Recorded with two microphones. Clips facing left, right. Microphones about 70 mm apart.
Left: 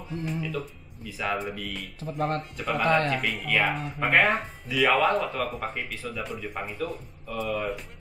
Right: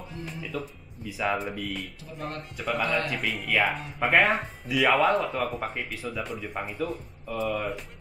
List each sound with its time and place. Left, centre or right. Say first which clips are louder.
0.1 s speech: left 5 dB; centre
2.1 s speech: left 8 dB; left
2.5 s speech: left 1 dB; centre
2.8 s speech: left 6 dB; left
3.2 s speech: even; centre